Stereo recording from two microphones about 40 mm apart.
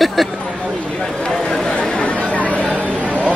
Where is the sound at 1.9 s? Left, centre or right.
Left.